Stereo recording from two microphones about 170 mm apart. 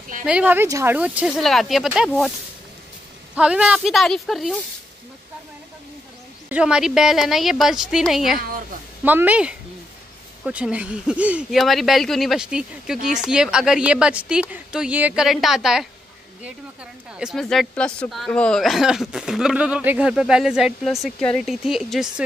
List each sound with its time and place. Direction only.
0.2 s speech: 5° right (ahead or behind)
3.3 s speech: 5° right (ahead or behind)
6.5 s speech: 5° right (ahead or behind)
17.2 s speech: centre (ahead or behind)